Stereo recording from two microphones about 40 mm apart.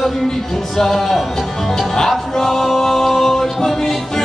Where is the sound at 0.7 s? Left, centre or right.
Centre.